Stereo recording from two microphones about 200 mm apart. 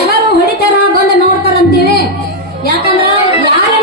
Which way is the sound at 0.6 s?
50° left (ahead or behind).